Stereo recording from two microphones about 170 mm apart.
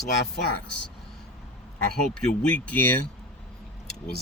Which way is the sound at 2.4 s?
10° left (ahead or behind).